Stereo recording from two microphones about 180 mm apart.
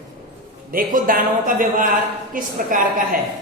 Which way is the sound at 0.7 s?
50° right (ahead or behind).